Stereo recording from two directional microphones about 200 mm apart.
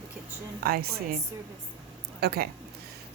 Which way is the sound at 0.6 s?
50° right (ahead or behind).